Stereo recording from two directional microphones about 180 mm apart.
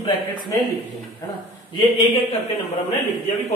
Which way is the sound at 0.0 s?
25° left (ahead or behind).